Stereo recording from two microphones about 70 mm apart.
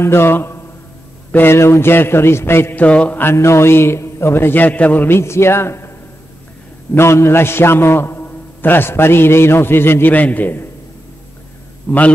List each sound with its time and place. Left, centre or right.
0.0 s a man's voice: left
2.7 s mantra: centre
3.3 s a man's voice: left
5.1 s a man's voice: left
7.0 s a man's voice: left
10.1 s mantra: left
11.9 s mantra: left